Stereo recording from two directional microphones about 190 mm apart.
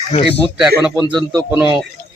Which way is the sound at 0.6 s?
5° right (ahead or behind).